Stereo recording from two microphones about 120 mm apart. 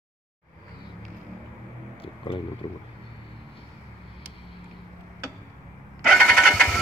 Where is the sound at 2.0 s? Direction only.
50° left (ahead or behind).